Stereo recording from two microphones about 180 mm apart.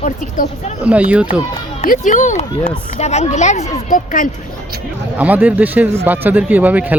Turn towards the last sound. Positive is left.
turn(degrees=-10)  # may be behind; listen again after turning